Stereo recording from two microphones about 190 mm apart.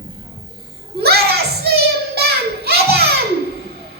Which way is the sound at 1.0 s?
55° right (ahead or behind).